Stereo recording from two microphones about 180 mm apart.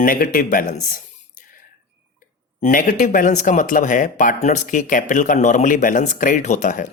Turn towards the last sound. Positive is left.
turn(degrees=45)  # may be behind; listen again after turning